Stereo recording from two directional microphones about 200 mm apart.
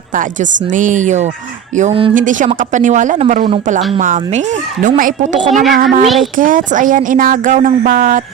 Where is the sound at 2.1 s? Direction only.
40° right (ahead or behind).